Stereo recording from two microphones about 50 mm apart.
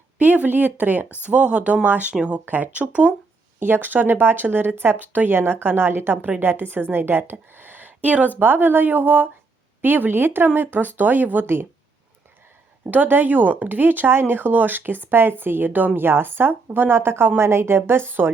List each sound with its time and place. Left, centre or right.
0.2 s speech: right
1.2 s speech: right
2.1 s speech: right
2.4 s speech: right
3.6 s a woman's voice: right
8.4 s speech: right
12.9 s speech: right
14.1 s a woman's voice: right